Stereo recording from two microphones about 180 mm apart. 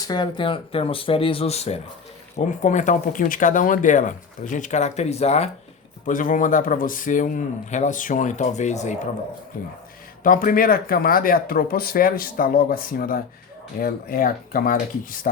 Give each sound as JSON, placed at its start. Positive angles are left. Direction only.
{"t": 0.0, "sound": "speech", "side_deg": 25}
{"t": 6.1, "sound": "speech", "side_deg": 50}
{"t": 10.2, "sound": "speech", "side_deg": 50}